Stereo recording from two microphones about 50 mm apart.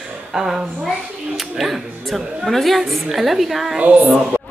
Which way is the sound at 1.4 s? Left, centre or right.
Centre.